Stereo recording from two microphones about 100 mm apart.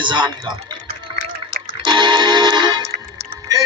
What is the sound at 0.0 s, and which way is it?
Typing, 55° right (ahead or behind).